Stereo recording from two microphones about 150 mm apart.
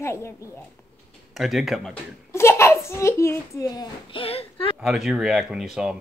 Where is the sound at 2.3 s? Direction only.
15° left (ahead or behind).